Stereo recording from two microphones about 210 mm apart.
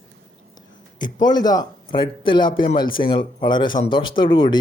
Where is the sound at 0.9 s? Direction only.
20° left (ahead or behind).